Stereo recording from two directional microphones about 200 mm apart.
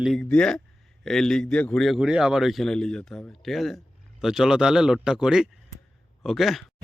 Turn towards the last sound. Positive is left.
turn(degrees=0)  # may be behind; listen again after turning